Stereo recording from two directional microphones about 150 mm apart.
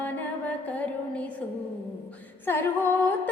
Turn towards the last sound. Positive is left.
turn(degrees=15)  # may be behind; listen again after turning